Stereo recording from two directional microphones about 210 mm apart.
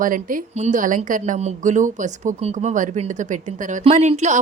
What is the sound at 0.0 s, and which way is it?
Speech, 40° right (ahead or behind).